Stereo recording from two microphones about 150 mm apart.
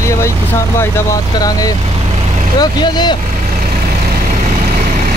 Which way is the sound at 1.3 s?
25° left (ahead or behind).